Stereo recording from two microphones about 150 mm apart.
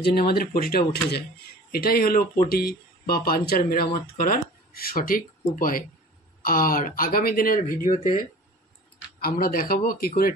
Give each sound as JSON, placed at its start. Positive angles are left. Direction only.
{"t": 0.0, "sound": "speech", "side_deg": 90}
{"t": 2.5, "sound": "speech", "side_deg": 90}
{"t": 9.2, "sound": "speech", "side_deg": 75}